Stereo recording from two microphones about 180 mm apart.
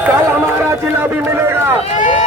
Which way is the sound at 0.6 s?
10° right (ahead or behind).